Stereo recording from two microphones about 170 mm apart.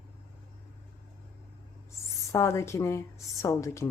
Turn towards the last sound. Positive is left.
turn(degrees=15)  # may be behind; listen again after turning